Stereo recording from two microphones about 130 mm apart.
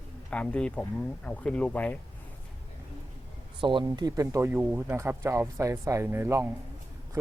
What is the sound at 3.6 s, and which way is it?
Speech, 40° right (ahead or behind).